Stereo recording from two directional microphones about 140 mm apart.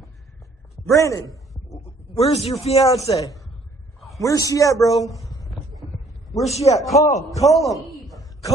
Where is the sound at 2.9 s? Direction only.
25° left (ahead or behind).